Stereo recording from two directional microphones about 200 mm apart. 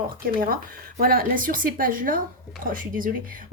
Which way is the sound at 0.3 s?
45° right (ahead or behind).